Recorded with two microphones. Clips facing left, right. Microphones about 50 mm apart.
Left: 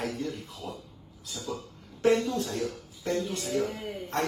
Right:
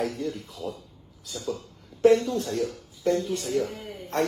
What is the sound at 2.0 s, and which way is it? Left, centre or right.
Speech, left.